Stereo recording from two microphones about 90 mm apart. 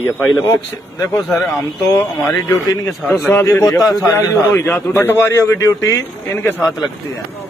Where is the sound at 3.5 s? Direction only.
35° left (ahead or behind).